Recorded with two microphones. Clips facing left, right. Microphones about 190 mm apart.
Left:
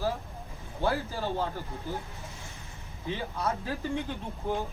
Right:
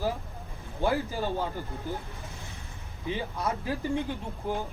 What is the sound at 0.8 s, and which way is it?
Speech, 15° right (ahead or behind).